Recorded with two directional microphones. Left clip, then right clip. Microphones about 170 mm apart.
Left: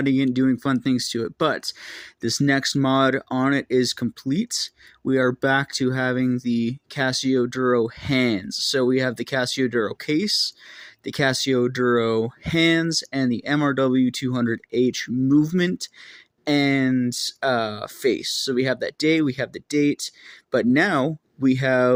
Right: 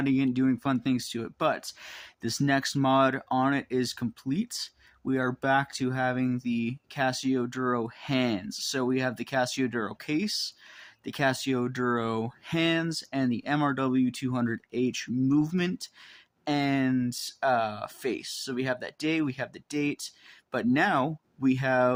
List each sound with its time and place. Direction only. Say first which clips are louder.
0.0 s speech: left 6 dB; 20° left (ahead or behind)